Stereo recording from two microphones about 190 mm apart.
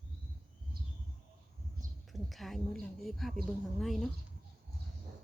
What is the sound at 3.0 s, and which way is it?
Speech, centre (ahead or behind).